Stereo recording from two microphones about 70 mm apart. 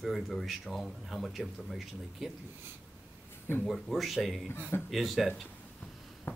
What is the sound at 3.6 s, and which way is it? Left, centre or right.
Speech, centre.